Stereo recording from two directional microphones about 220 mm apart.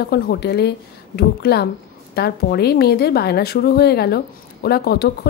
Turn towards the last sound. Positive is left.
turn(degrees=45)  # may be behind; listen again after turning